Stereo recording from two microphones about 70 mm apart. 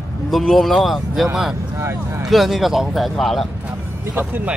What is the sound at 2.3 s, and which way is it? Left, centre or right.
Speech, centre.